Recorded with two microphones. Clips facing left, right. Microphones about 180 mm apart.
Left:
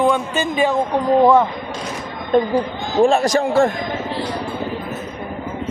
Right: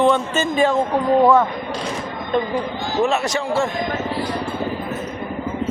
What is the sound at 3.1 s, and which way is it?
Speech, 45° left (ahead or behind).